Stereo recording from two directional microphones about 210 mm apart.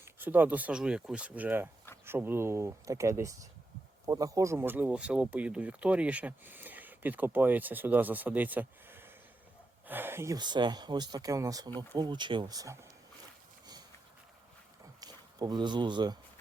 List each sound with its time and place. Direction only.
0.0 s speech: 10° right (ahead or behind)
15.0 s speech: 20° right (ahead or behind)